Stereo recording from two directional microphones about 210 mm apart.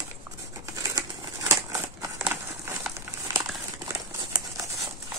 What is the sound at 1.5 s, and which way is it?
Crumpling, 10° right (ahead or behind).